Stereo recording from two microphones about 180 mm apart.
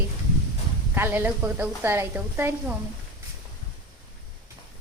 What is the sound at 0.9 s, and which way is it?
A woman's voice, 10° right (ahead or behind).